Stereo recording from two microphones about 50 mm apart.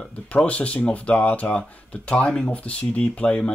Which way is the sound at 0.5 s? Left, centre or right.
Left.